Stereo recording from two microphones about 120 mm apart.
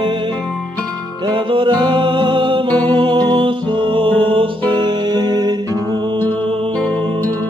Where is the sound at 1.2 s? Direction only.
45° right (ahead or behind).